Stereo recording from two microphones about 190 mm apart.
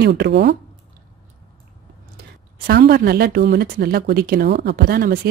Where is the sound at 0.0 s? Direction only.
60° right (ahead or behind).